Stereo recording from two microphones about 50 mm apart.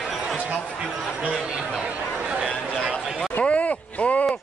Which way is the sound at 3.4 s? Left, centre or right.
Left.